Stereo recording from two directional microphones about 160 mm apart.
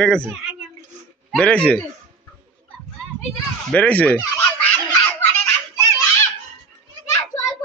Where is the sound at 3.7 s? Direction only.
10° left (ahead or behind).